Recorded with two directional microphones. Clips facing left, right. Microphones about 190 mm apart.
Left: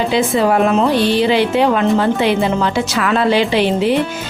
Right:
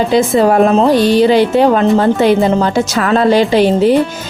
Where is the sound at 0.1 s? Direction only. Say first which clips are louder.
Right 5 dB; 40° right (ahead or behind).